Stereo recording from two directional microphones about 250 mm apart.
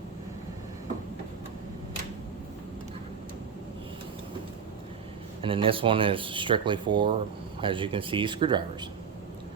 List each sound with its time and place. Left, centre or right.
5.4 s speech: right